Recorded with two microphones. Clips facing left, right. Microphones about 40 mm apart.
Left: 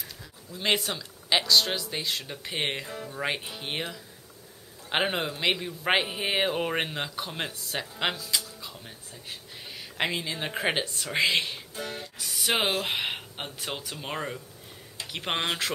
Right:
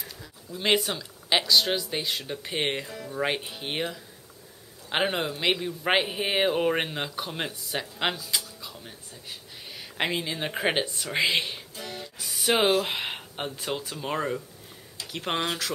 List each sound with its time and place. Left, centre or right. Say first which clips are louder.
0.0 s a man's voice: right 1 dB; centre
8.5 s music: even; centre
9.6 s speech: even; centre
11.7 s music: left 2 dB; left
12.3 s a sound: right 3 dB; centre
12.8 s speech: left 1 dB; centre
14.0 s a man's voice: right 5 dB; centre
15.0 s a sound: even; left
15.4 s speech: left 1 dB; left